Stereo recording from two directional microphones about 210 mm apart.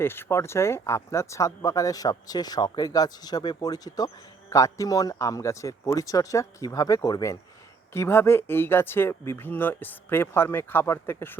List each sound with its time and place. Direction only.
0.0 s speech: 10° left (ahead or behind)